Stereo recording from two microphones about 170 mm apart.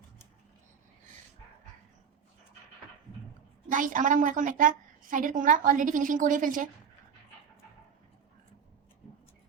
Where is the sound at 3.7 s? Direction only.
50° right (ahead or behind).